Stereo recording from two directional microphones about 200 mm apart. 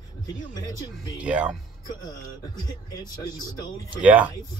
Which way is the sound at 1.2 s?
5° right (ahead or behind).